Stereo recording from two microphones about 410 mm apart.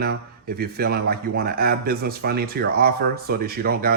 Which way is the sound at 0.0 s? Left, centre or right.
Right.